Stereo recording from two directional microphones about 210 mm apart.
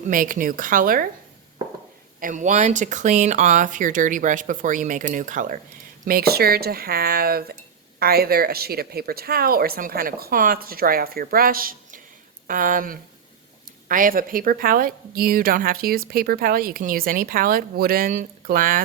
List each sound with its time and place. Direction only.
0.1 s speech: 40° right (ahead or behind)
2.2 s speech: 35° right (ahead or behind)